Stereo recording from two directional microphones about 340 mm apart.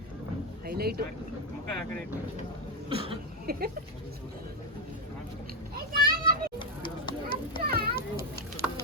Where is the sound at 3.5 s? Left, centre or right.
Right.